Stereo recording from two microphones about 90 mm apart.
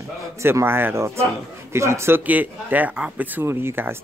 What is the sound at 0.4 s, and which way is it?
Speech, 30° right (ahead or behind).